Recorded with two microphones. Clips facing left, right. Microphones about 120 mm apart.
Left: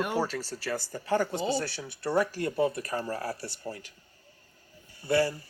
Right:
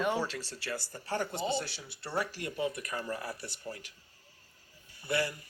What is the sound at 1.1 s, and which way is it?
Speech, 40° left (ahead or behind).